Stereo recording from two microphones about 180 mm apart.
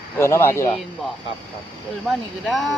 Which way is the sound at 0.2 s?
15° left (ahead or behind).